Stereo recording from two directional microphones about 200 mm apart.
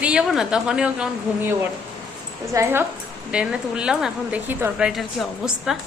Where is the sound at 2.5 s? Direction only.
15° right (ahead or behind).